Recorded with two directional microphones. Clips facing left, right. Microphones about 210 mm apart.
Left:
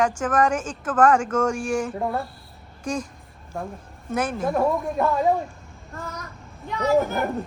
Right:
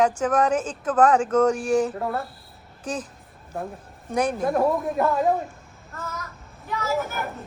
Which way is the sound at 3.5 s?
5° right (ahead or behind).